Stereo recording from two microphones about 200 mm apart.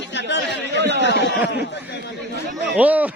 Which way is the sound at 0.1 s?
60° left (ahead or behind).